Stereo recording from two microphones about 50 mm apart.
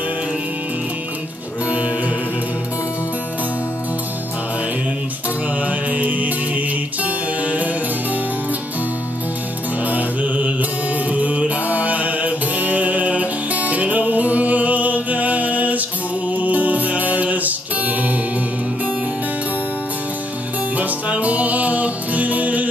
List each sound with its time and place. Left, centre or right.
5.6 s music: right
9.8 s mantra: right
16.3 s music: right
20.7 s music: right